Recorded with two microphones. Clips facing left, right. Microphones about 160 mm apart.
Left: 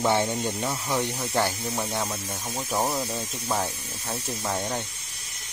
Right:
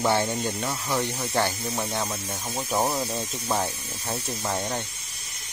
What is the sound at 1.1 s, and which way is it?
Speech, centre (ahead or behind).